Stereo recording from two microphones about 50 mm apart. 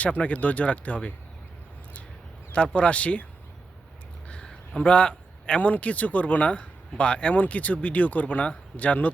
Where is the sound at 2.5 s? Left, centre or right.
Left.